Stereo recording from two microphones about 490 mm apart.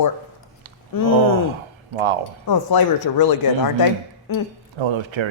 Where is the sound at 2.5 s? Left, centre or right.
Left.